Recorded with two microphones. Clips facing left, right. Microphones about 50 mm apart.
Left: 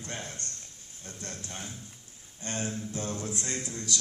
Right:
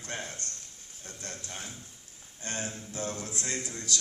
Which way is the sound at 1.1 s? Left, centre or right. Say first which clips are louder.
Left 1 dB; centre.